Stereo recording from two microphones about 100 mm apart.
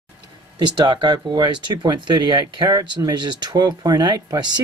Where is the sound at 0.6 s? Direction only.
50° right (ahead or behind).